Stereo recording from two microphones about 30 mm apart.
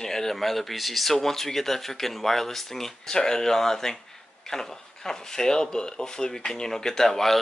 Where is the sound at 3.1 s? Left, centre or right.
Left.